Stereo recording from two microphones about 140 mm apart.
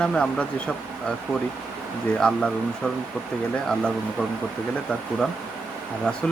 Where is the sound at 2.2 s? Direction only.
5° left (ahead or behind).